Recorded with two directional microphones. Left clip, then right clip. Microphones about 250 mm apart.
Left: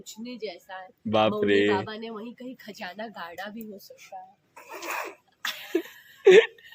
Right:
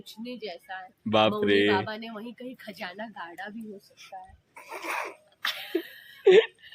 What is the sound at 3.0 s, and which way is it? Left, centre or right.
Speech, left.